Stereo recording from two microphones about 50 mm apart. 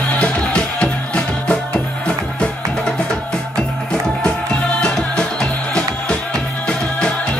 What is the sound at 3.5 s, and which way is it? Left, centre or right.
Music, centre.